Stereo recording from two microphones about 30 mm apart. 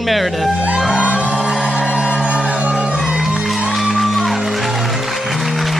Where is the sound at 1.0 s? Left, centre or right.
Right.